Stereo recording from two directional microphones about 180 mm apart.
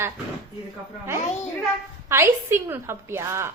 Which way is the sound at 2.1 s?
15° right (ahead or behind).